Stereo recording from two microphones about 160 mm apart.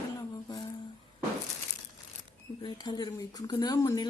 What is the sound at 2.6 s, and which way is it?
Speech, 25° left (ahead or behind).